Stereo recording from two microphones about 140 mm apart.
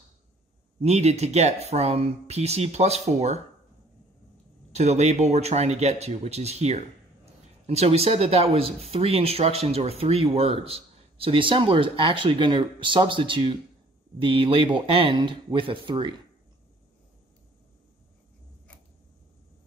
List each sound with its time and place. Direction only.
0.7 s speech: 50° right (ahead or behind)
4.7 s speech: 50° right (ahead or behind); by 16.1 s 35° right (ahead or behind)